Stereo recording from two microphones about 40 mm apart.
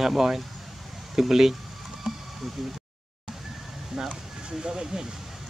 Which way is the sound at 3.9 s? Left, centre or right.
Centre.